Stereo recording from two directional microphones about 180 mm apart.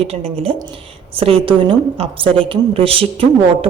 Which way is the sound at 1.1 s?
30° right (ahead or behind).